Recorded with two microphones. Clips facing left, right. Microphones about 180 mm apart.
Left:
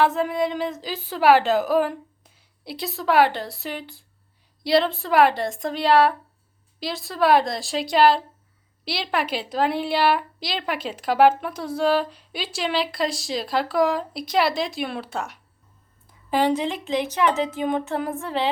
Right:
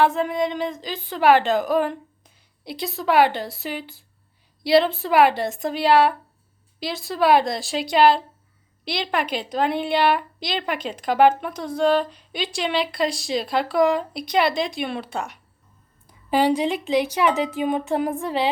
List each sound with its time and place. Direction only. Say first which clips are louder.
0.0 s a woman's voice: right 1 dB; centre (ahead or behind)
16.0 s a woman's voice: right 2 dB; 10° right (ahead or behind)